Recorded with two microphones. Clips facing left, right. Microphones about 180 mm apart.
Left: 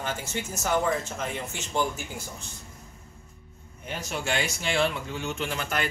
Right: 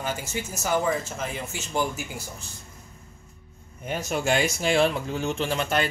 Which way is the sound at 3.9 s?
45° right (ahead or behind).